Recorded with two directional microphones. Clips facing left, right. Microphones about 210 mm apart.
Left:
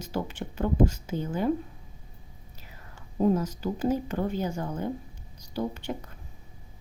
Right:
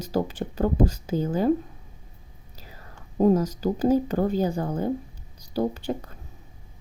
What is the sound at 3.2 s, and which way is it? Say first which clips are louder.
Speech: right 5 dB; 40° right (ahead or behind).